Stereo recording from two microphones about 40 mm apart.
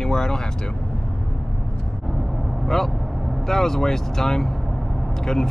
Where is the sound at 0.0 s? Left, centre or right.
Centre.